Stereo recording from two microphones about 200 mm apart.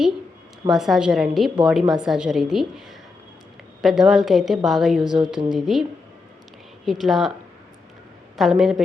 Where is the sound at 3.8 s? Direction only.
Centre (ahead or behind).